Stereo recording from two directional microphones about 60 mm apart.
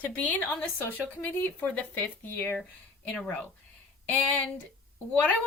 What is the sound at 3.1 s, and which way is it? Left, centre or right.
Speech, centre.